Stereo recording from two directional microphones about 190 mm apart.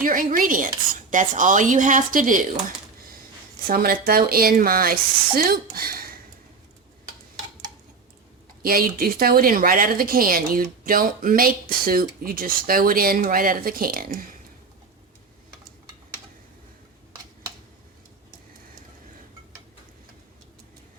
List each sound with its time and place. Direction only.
0.0 s a woman's voice: 45° right (ahead or behind)
5.7 s a sound: 50° right (ahead or behind)
8.6 s a woman's voice: 50° right (ahead or behind)